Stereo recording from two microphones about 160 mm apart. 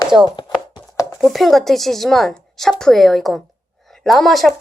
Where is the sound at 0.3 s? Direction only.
25° left (ahead or behind).